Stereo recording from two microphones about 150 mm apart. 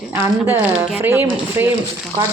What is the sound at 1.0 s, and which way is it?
Speech, 15° right (ahead or behind).